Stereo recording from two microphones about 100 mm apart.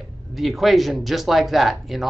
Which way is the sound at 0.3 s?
Centre (ahead or behind).